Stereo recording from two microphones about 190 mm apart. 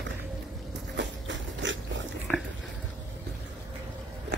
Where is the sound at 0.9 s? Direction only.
70° right (ahead or behind).